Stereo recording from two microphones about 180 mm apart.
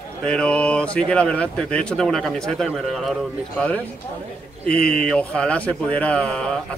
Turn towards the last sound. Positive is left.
turn(degrees=5)  # may be behind; listen again after turning